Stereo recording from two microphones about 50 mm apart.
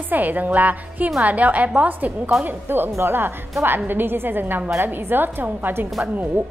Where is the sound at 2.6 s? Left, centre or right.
Right.